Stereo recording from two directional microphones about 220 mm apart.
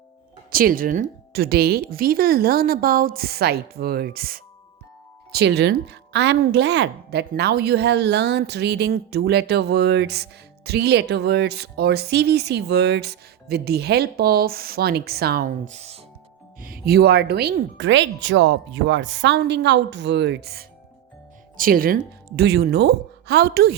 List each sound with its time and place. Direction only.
0.5 s a woman's voice: 40° right (ahead or behind)
16.6 s a woman's voice: 40° right (ahead or behind)